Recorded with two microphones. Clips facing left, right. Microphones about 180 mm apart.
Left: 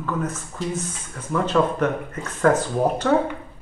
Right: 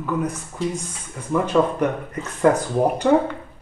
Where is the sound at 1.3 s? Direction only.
15° right (ahead or behind).